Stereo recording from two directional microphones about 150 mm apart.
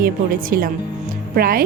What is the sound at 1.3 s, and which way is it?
Speech, 75° right (ahead or behind).